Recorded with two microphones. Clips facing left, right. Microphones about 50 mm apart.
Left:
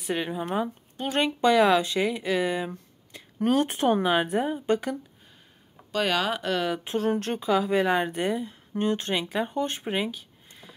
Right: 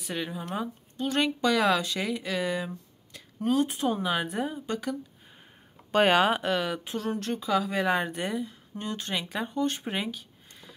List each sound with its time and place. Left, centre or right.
0.0 s speech: left
3.4 s speech: left
4.0 s speech: left
5.9 s speech: right
6.4 s a woman's voice: centre
6.8 s speech: left
7.4 s speech: centre
7.8 s speech: centre
8.7 s speech: left
9.1 s speech: centre
9.5 s speech: left
9.8 s a sound: centre